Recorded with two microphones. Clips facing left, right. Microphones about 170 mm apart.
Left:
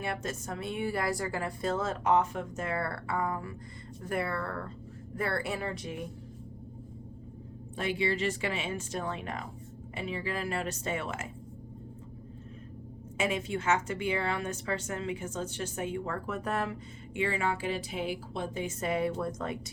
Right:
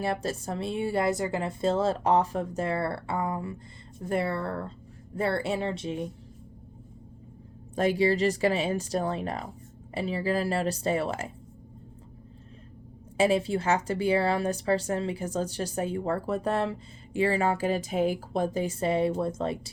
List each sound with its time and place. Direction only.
0.0 s speech: 35° right (ahead or behind)
7.8 s a woman's voice: 40° right (ahead or behind)
13.1 s a woman's voice: 35° right (ahead or behind)